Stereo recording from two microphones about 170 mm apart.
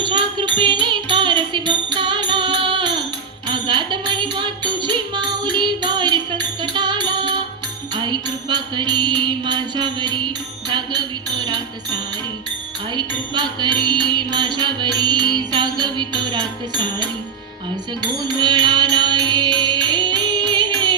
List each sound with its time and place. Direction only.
0.0 s music: 25° right (ahead or behind)